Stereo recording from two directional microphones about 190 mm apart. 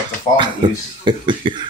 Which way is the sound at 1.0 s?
25° right (ahead or behind).